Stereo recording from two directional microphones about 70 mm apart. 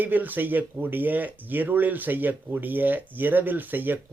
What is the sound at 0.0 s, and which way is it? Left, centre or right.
Speech, right.